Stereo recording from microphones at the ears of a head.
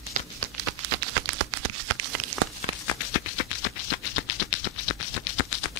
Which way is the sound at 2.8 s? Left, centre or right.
Left.